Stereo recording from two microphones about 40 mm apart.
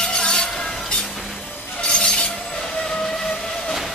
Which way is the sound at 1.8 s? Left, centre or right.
Left.